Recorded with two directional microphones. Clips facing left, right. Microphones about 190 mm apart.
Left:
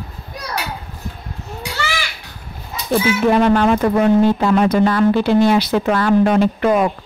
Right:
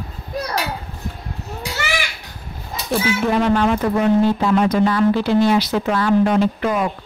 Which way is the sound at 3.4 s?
55° left (ahead or behind).